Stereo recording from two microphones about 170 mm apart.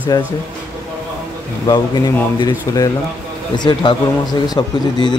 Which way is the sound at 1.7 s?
25° left (ahead or behind).